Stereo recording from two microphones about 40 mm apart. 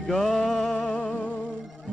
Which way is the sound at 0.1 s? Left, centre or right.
Centre.